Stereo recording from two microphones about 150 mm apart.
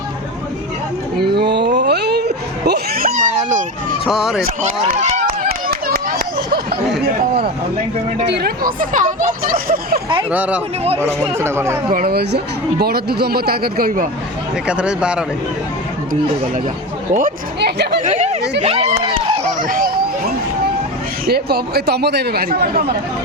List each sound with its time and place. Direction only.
1.2 s a sound: 90° right; by 3.6 s 70° right (ahead or behind)
4.0 s speech: centre (ahead or behind)
4.9 s speech: 55° right (ahead or behind)
5.5 s a sound: 90° right
8.3 s speech: 90° right
10.3 s speech: 10° right (ahead or behind)
11.9 s speech: 80° right
14.7 s speech: 5° right (ahead or behind)
17.1 s speech: 60° right (ahead or behind); by 17.8 s 90° right
18.0 s speech: 50° right (ahead or behind)
19.6 s a sound: 75° right (ahead or behind)
21.2 s speech: 90° right